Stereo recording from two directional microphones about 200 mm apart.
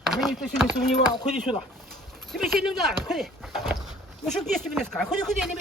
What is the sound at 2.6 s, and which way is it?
Speech, centre (ahead or behind).